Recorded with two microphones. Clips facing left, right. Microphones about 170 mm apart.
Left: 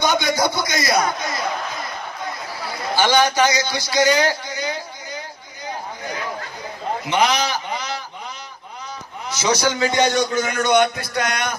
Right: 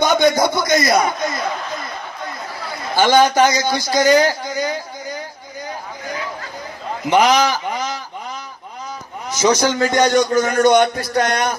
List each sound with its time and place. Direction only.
0.0 s a sound: 50° right (ahead or behind)
3.0 s a man's voice: 50° right (ahead or behind)
7.1 s a man's voice: 45° right (ahead or behind)
9.3 s a man's voice: 45° right (ahead or behind)